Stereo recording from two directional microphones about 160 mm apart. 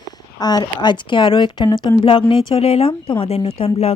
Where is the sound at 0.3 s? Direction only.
25° left (ahead or behind).